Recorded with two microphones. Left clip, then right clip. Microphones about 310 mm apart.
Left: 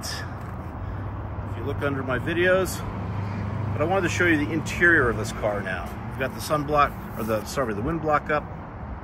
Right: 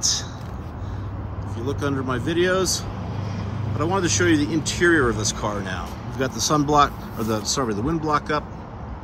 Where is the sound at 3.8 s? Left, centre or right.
Centre.